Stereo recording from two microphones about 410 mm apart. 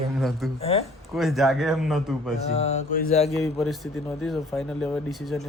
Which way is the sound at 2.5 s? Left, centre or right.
Centre.